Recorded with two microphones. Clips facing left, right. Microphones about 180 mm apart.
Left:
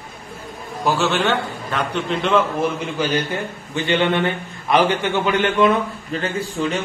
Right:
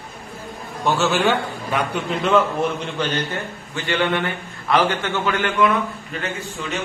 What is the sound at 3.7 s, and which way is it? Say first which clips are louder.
A man's voice: left 3 dB; 20° left (ahead or behind).